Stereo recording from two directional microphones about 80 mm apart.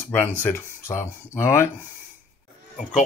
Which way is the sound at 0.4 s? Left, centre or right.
Left.